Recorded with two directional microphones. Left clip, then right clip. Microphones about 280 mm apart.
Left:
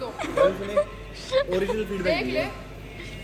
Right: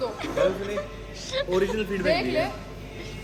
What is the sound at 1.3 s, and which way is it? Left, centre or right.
Speech, centre.